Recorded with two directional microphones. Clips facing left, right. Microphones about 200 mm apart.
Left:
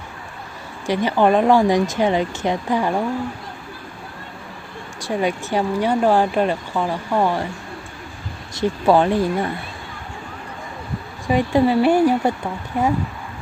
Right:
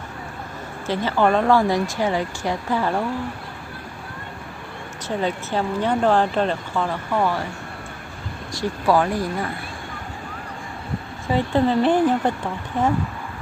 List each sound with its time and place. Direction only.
0.9 s speech: 15° left (ahead or behind)
4.9 s speech: 10° left (ahead or behind)
8.5 s speech: 25° left (ahead or behind)
11.3 s speech: 15° left (ahead or behind)